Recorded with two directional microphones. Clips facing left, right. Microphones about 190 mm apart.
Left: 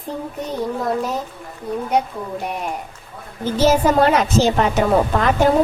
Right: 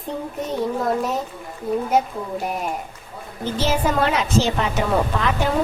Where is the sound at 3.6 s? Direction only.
45° left (ahead or behind).